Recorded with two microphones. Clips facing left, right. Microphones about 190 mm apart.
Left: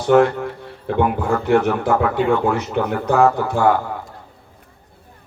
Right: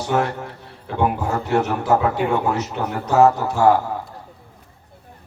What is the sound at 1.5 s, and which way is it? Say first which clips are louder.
A man's voice: left 2 dB; 55° left (ahead or behind).